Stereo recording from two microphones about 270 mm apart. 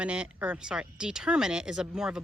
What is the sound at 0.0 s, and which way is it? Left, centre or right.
Speech, centre.